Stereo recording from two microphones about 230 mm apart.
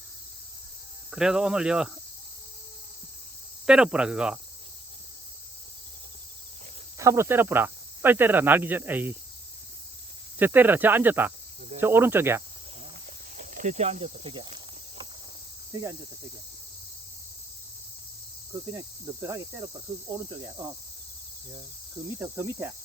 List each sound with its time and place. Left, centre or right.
1.1 s speech: centre
3.7 s speech: centre
7.0 s speech: centre
10.3 s speech: centre
13.4 s cricket: right
18.7 s speech: centre
22.2 s speech: centre